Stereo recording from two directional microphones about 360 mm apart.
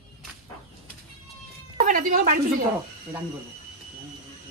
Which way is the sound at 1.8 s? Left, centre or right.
Right.